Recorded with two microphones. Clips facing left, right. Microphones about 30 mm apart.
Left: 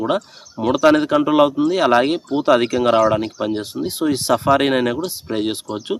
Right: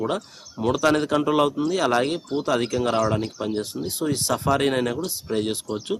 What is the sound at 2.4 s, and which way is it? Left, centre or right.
Speech, left.